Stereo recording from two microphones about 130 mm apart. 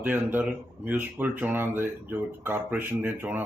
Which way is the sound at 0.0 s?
10° right (ahead or behind).